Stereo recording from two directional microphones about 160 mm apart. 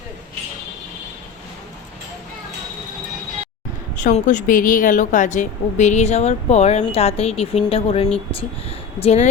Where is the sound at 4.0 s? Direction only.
50° left (ahead or behind).